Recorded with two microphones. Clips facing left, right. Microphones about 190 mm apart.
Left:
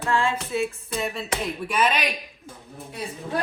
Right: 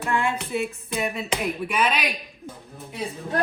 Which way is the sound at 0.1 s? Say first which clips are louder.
Left 1 dB; 20° right (ahead or behind).